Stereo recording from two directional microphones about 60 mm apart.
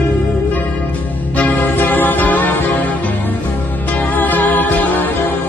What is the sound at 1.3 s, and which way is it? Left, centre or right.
Music, left.